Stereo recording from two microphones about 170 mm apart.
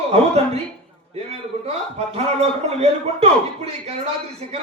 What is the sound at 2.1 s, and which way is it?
A man's voice, 40° right (ahead or behind).